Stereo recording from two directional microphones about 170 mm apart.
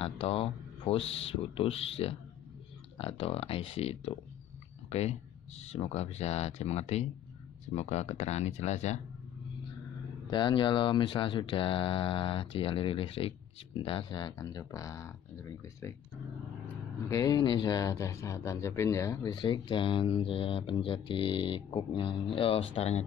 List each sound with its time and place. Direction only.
0.0 s speech: 35° left (ahead or behind)
4.8 s a sound: 40° left (ahead or behind)
5.6 s speech: 40° left (ahead or behind)
10.3 s speech: 30° left (ahead or behind)
17.1 s speech: 25° left (ahead or behind)
19.3 s speech: 30° left (ahead or behind)